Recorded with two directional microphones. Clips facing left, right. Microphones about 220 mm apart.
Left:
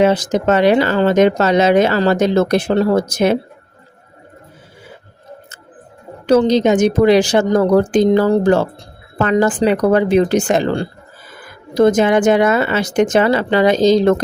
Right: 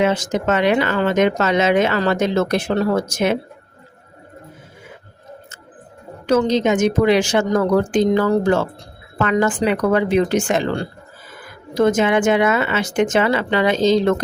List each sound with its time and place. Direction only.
0.0 s speech: 35° left (ahead or behind)
6.2 s speech: 35° left (ahead or behind)